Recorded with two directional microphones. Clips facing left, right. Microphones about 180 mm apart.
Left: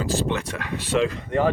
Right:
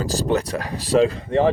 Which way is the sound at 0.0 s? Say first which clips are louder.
Right 3 dB; 40° right (ahead or behind).